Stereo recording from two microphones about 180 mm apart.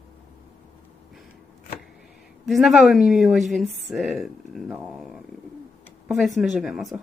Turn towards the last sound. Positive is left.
turn(degrees=-5)  # may be behind; listen again after turning